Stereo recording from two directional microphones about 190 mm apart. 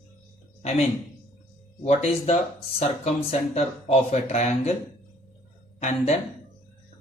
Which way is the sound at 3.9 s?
35° left (ahead or behind).